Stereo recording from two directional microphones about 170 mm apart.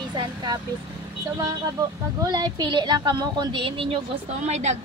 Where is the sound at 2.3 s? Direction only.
25° right (ahead or behind).